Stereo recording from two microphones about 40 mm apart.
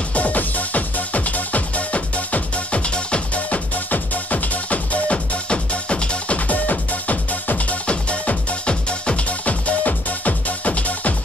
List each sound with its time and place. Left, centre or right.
0.1 s music: left